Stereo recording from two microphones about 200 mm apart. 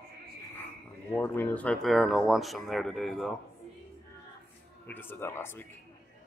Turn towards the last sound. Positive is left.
turn(degrees=10)  # may be behind; listen again after turning